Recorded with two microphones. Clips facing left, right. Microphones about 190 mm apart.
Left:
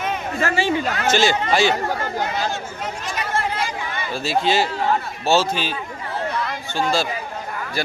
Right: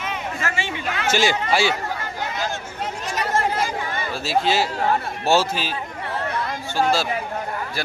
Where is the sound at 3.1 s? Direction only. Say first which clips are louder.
Right 3 dB; 40° right (ahead or behind).